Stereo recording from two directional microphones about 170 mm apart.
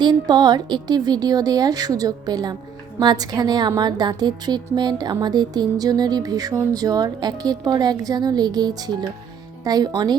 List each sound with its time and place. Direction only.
0.0 s a woman's voice: 25° right (ahead or behind)